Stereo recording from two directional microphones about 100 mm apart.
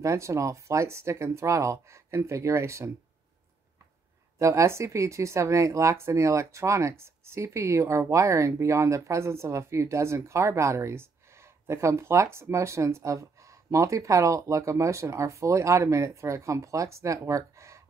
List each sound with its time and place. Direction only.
0.0 s speech: 30° right (ahead or behind)
4.4 s speech: 30° right (ahead or behind)